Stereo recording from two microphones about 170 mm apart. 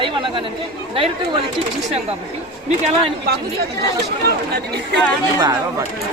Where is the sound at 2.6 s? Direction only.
40° right (ahead or behind).